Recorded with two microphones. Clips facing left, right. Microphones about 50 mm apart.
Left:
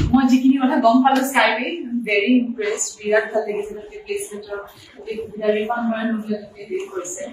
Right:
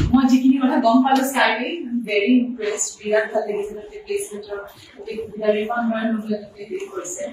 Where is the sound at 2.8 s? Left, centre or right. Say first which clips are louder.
Left 2 dB; left.